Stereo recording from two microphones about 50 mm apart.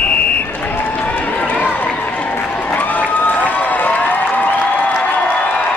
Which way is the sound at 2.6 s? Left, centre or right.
Left.